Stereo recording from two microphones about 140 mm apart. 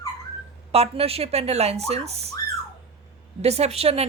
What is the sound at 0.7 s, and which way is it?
A man's voice, 45° right (ahead or behind).